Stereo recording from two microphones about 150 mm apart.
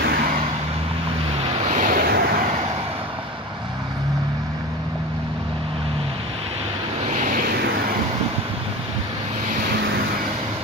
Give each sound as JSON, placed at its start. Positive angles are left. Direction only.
{"t": 0.0, "sound": "vehicle", "side_deg": -75}
{"t": 1.4, "sound": "vehicle", "side_deg": -45}
{"t": 1.9, "sound": "vehicle", "side_deg": -90}
{"t": 7.1, "sound": "vehicle", "side_deg": -55}